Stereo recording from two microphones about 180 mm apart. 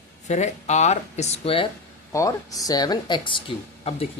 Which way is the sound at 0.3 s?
40° left (ahead or behind).